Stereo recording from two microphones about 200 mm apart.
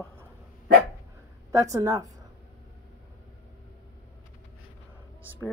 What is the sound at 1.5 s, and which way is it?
Speech, 15° right (ahead or behind).